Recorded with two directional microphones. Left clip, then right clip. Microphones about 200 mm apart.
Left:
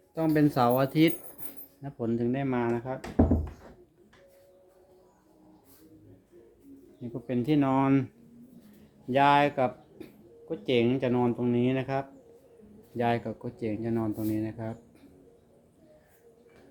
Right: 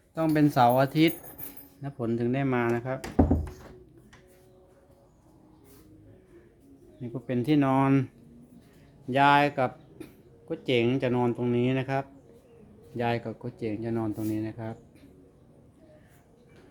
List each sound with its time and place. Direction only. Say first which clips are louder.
0.1 s speech: right 1 dB; 15° right (ahead or behind)
7.0 s speech: right 1 dB; 15° right (ahead or behind)
9.0 s speech: right 1 dB; 10° right (ahead or behind)